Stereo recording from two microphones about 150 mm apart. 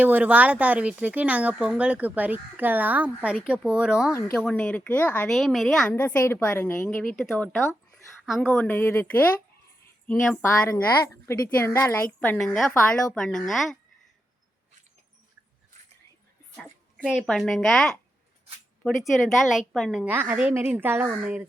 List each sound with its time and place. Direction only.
0.0 s speech: 10° right (ahead or behind)
4.4 s a woman's voice: 5° left (ahead or behind)
5.3 s a woman's voice: centre (ahead or behind)
6.0 s a woman's voice: 15° left (ahead or behind)
10.4 s a woman's voice: 20° left (ahead or behind)
12.5 s a woman's voice: centre (ahead or behind)
16.6 s a sound: 5° right (ahead or behind)
17.2 s a woman's voice: centre (ahead or behind)